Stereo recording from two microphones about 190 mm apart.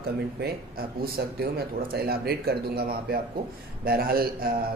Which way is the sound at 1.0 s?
55° right (ahead or behind).